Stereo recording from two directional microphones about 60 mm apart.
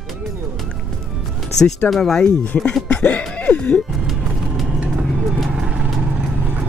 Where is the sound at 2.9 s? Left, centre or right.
Centre.